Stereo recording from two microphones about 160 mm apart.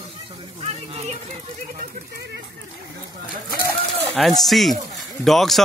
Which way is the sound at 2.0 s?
90° right.